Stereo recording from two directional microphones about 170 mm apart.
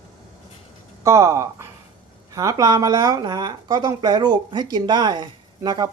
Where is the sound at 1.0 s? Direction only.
15° right (ahead or behind).